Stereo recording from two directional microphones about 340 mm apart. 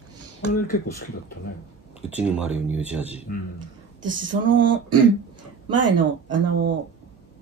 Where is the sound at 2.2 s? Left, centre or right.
Centre.